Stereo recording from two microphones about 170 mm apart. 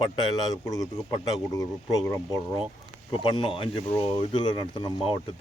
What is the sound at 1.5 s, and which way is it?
Speech, 20° left (ahead or behind).